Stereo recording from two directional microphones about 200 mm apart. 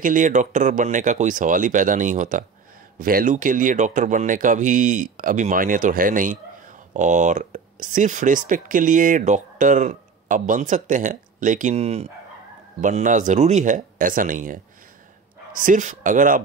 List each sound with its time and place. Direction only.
0.0 s speech: 40° right (ahead or behind)